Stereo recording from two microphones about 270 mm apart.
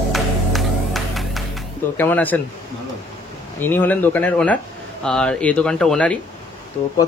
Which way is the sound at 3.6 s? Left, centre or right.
Centre.